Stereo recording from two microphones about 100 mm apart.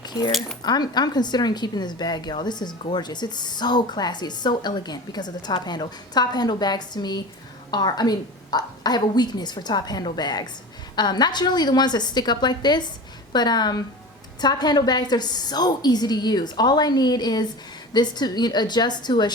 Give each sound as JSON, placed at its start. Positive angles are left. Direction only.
{"t": 0.0, "sound": "a sound", "side_deg": 45}
{"t": 0.3, "sound": "speech", "side_deg": 0}
{"t": 0.6, "sound": "speech", "side_deg": 45}